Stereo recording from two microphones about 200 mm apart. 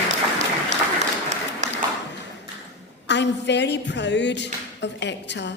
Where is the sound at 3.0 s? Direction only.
60° left (ahead or behind).